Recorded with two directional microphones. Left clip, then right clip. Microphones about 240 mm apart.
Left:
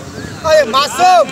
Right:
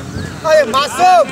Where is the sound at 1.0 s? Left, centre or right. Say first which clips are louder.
Even; centre.